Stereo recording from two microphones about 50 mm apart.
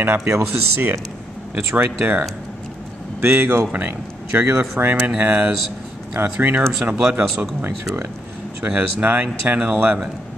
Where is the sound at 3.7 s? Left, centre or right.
Right.